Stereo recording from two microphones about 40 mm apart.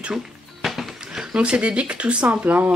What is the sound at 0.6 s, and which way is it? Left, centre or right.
Music, centre.